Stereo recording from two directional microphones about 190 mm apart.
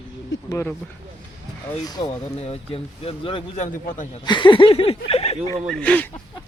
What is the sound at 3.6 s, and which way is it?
Speech, 45° left (ahead or behind).